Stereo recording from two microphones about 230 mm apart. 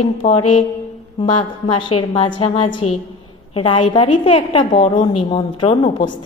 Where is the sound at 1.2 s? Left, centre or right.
Centre.